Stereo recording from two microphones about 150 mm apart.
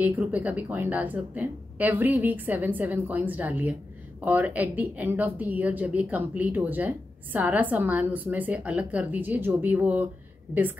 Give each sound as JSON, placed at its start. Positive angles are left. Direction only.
{"t": 0.0, "sound": "a woman's voice", "side_deg": -10}